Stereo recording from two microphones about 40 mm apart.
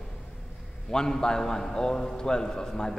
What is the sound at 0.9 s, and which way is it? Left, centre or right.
A man's voice, centre.